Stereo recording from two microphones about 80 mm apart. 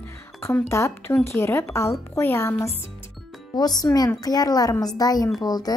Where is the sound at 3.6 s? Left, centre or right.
Left.